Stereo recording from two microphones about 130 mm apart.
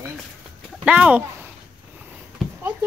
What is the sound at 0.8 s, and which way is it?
Speech, 10° right (ahead or behind).